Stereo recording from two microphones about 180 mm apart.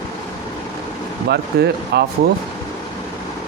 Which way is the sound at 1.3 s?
65° right (ahead or behind).